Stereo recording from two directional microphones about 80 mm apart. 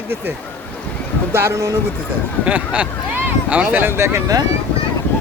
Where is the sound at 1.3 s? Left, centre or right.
Right.